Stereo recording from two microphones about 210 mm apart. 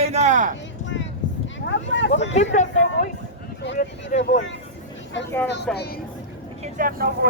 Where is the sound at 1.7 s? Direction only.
60° left (ahead or behind).